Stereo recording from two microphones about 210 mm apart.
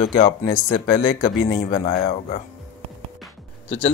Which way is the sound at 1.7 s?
35° left (ahead or behind).